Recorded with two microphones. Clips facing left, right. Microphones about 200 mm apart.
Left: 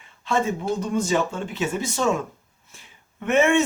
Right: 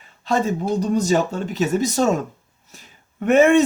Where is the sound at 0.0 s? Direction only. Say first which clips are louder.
Right 3 dB; 40° right (ahead or behind).